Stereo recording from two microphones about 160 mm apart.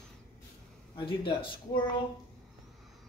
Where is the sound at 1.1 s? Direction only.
30° left (ahead or behind).